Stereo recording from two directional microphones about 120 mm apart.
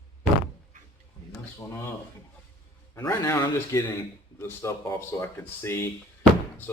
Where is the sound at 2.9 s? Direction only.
30° left (ahead or behind).